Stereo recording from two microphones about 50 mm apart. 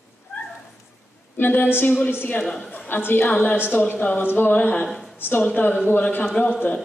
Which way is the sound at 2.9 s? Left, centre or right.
Left.